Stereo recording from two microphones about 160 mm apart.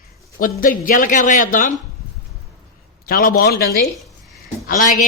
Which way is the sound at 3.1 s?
65° left (ahead or behind).